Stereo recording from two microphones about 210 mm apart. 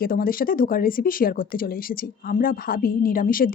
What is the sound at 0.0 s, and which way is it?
Speech, 45° left (ahead or behind).